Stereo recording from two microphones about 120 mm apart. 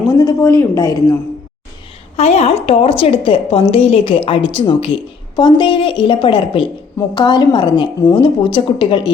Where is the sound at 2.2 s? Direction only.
65° left (ahead or behind).